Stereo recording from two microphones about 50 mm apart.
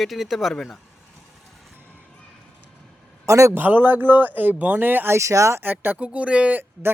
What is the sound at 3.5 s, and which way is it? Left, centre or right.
Speech, right.